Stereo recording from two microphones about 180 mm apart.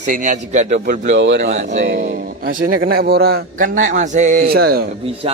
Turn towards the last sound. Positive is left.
turn(degrees=-60)  # may be behind; listen again after turning